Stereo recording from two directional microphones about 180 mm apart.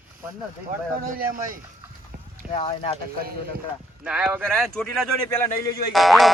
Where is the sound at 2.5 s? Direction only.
35° left (ahead or behind).